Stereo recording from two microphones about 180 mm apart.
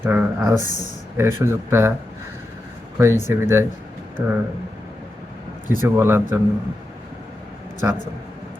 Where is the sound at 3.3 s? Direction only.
15° right (ahead or behind).